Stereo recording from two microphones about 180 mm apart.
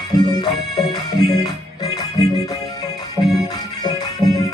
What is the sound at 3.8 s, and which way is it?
Music, 20° left (ahead or behind).